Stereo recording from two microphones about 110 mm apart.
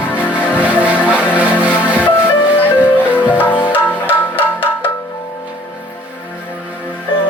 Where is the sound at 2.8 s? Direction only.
15° left (ahead or behind).